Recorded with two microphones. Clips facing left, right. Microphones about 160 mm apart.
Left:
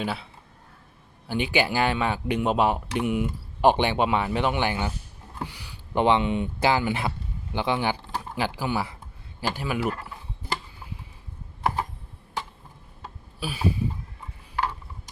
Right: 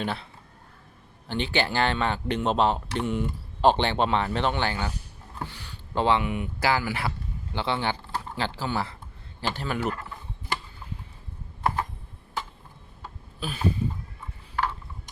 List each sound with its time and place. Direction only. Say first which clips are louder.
0.0 s speech: left 1 dB; 5° left (ahead or behind)
1.3 s speech: left 2 dB; 10° left (ahead or behind)
13.0 s a sound: left 1 dB; 10° left (ahead or behind)
14.5 s mechanisms: even; 15° left (ahead or behind)